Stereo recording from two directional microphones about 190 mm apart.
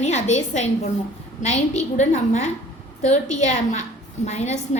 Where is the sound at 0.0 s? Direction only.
35° left (ahead or behind).